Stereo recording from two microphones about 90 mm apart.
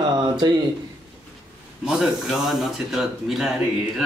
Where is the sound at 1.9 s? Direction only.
5° right (ahead or behind).